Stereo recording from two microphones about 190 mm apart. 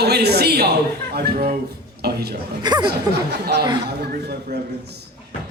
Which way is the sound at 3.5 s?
65° right (ahead or behind).